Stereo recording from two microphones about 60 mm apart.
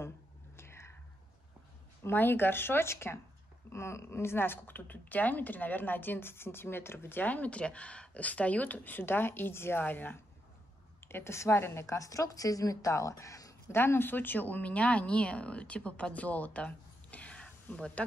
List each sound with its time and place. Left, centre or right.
0.6 s whispering: left
2.0 s speech: left
9.8 s speech: left
11.1 s speech: left
11.8 s speech: left
13.7 s speech: left; by 18.0 s centre